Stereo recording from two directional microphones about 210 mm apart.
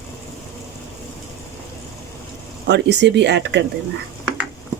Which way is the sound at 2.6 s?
55° right (ahead or behind).